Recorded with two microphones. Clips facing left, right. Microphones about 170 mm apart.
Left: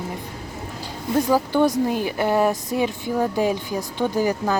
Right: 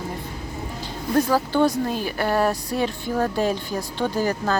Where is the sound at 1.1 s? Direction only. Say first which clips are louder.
Left 1 dB; 15° left (ahead or behind).